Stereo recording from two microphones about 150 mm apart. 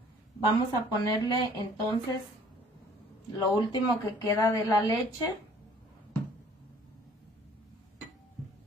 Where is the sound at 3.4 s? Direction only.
30° left (ahead or behind).